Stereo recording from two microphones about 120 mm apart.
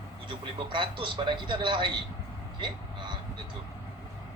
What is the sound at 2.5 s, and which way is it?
Vehicle, 40° right (ahead or behind).